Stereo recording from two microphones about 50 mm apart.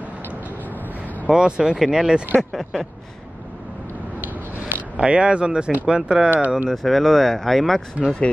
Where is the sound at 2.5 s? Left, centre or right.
Centre.